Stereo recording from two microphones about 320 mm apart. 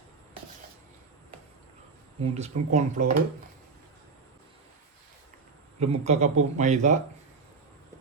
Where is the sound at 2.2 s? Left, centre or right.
Centre.